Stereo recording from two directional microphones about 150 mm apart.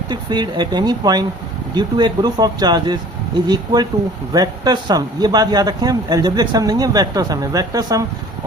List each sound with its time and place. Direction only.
0.1 s speech: 30° right (ahead or behind)